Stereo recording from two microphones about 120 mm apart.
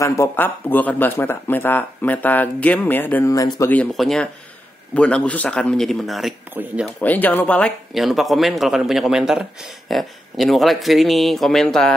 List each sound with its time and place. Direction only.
0.0 s speech: 25° left (ahead or behind)
3.3 s speech: 25° left (ahead or behind)
3.9 s speech: centre (ahead or behind)
7.0 s speech: 15° left (ahead or behind)
7.9 s speech: centre (ahead or behind)